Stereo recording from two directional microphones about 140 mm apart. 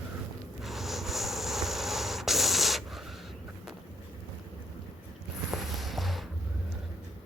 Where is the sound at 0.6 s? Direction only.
Centre (ahead or behind).